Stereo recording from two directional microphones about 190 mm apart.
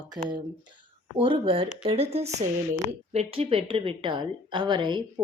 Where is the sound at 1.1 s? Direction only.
25° right (ahead or behind).